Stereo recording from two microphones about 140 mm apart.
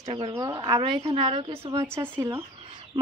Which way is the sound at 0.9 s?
45° right (ahead or behind).